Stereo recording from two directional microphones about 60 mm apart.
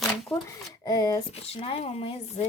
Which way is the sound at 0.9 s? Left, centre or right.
Left.